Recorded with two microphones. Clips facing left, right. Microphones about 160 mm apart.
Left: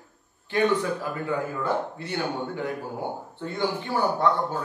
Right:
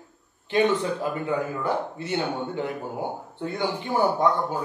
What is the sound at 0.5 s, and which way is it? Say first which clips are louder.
A man's voice: right 1 dB; 20° right (ahead or behind).